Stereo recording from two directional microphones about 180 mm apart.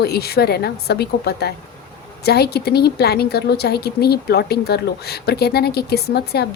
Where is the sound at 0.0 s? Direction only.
60° left (ahead or behind).